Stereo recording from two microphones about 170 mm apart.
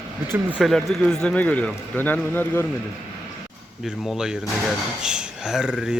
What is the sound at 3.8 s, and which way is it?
Speech, 5° right (ahead or behind).